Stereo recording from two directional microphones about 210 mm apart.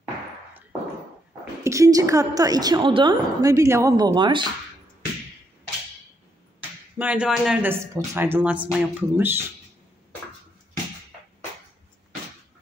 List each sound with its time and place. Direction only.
1.6 s a woman's voice: 15° right (ahead or behind)
7.0 s a woman's voice: 5° right (ahead or behind)